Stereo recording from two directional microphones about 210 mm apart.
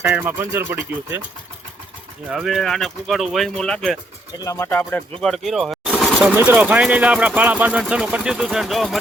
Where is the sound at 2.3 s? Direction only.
Centre (ahead or behind).